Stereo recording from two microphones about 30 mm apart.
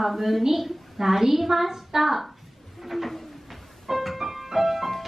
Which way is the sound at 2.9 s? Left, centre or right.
Centre.